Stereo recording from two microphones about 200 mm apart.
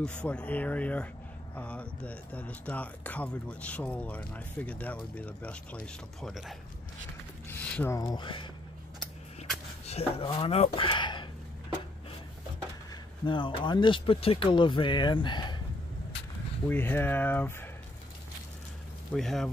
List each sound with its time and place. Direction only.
0.0 s speech: 5° left (ahead or behind)
7.4 s speech: 10° left (ahead or behind)
9.8 s speech: 30° left (ahead or behind)
13.2 s speech: 25° left (ahead or behind)
16.6 s speech: 10° left (ahead or behind)
19.1 s speech: centre (ahead or behind)